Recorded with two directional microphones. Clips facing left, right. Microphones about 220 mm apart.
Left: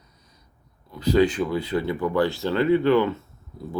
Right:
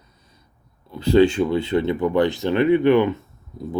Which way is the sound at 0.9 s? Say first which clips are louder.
Right 4 dB; 30° right (ahead or behind).